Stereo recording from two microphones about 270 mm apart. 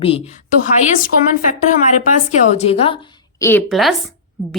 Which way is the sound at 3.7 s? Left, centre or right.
Centre.